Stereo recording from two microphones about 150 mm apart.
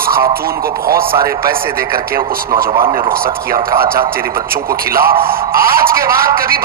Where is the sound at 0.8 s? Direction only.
80° right.